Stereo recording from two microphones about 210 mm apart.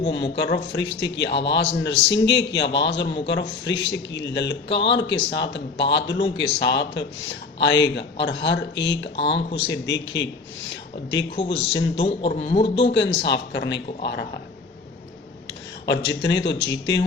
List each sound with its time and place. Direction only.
0.7 s speech: 55° left (ahead or behind)
9.1 s a man's voice: 25° left (ahead or behind)
9.6 s speech: 60° left (ahead or behind)
11.4 s speech: 60° left (ahead or behind)
12.0 s a man's voice: 30° left (ahead or behind)
12.9 s speech: 55° left (ahead or behind)
15.9 s speech: 55° left (ahead or behind)